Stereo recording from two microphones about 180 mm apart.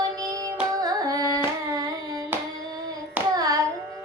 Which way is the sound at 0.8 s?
20° right (ahead or behind).